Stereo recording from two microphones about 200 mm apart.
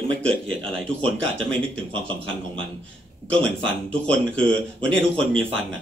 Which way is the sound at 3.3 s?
5° left (ahead or behind).